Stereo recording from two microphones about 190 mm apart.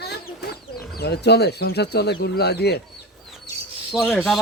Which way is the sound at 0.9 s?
60° left (ahead or behind).